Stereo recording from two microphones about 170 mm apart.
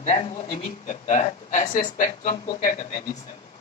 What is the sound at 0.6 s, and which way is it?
A woman's voice, 45° left (ahead or behind).